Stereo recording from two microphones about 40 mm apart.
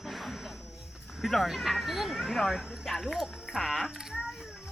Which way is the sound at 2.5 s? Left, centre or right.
Centre.